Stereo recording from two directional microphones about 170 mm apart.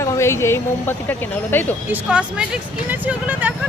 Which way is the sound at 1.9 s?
5° right (ahead or behind).